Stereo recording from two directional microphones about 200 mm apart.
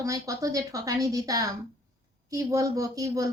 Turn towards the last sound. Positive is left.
turn(degrees=-15)  # may be behind; listen again after turning